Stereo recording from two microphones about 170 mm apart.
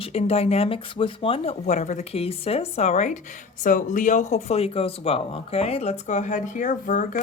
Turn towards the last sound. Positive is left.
turn(degrees=50)  # may be behind; listen again after turning